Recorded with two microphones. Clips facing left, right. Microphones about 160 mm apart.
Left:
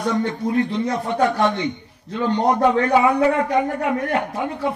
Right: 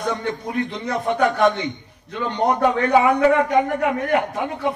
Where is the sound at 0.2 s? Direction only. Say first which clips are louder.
Left 4 dB; 30° left (ahead or behind).